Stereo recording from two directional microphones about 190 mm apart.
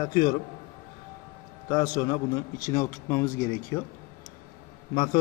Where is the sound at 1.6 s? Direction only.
20° left (ahead or behind).